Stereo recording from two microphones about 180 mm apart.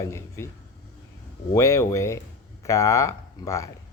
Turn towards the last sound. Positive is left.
turn(degrees=15)  # may be behind; listen again after turning